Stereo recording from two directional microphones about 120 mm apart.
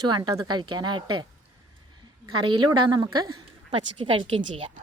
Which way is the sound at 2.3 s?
40° right (ahead or behind).